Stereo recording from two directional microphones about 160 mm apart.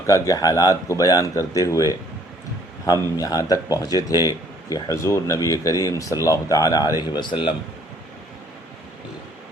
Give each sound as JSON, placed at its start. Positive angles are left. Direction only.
{"t": 0.1, "sound": "speech", "side_deg": 20}